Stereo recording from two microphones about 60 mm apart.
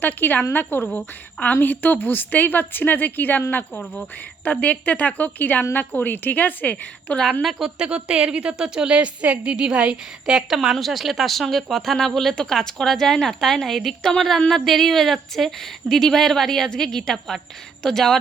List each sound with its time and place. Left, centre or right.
0.0 s a woman's voice: left
3.7 s a woman's voice: centre
7.8 s a woman's voice: centre